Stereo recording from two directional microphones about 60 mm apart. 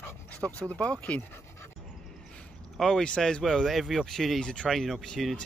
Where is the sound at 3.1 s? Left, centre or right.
Centre.